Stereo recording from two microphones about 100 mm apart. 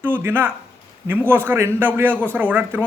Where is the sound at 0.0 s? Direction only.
20° right (ahead or behind).